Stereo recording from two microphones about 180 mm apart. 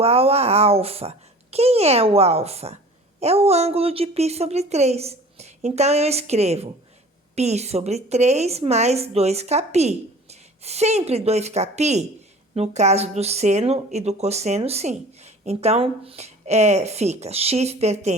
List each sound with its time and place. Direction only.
0.0 s speech: 35° right (ahead or behind)